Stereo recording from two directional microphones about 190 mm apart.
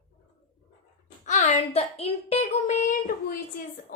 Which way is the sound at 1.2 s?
40° left (ahead or behind).